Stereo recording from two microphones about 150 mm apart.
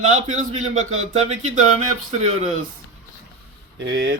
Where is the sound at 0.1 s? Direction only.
55° right (ahead or behind).